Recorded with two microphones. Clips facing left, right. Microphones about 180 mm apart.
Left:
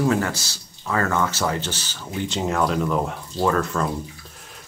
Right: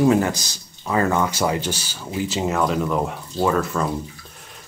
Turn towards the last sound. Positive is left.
turn(degrees=-5)  # may be behind; listen again after turning